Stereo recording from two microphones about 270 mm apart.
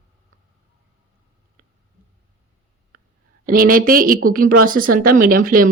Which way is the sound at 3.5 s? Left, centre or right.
Right.